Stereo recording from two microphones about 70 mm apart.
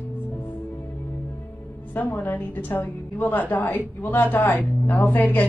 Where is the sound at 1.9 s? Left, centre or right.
Left.